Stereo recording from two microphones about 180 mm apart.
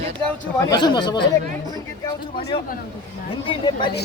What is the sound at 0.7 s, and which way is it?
Speech, 25° left (ahead or behind).